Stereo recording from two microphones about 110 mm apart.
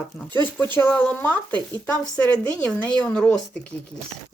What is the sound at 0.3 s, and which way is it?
Speech, 15° left (ahead or behind).